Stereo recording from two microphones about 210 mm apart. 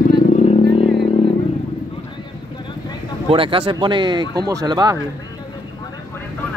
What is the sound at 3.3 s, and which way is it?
Speech, 25° right (ahead or behind).